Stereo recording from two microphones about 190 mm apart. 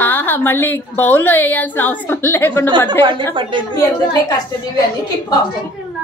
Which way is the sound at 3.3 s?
25° right (ahead or behind).